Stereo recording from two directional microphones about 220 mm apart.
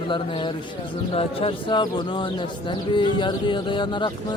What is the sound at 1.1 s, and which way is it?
Speech, 25° left (ahead or behind).